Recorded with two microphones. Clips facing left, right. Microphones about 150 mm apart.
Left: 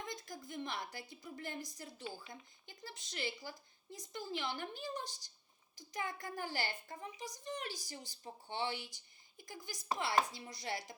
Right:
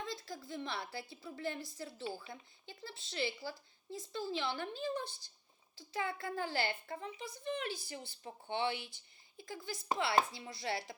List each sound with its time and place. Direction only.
0.0 s a woman's voice: 20° left (ahead or behind)